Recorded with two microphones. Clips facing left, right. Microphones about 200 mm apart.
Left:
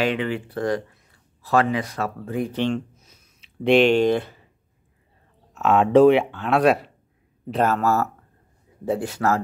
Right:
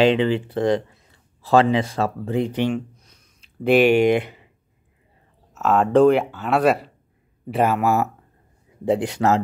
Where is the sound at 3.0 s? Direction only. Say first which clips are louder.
Even; centre (ahead or behind); by 4.5 s 15° right (ahead or behind).